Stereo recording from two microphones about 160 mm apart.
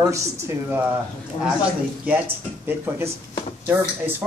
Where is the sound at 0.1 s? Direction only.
15° right (ahead or behind).